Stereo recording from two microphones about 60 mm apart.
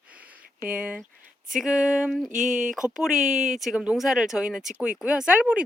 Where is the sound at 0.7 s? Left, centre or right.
Right.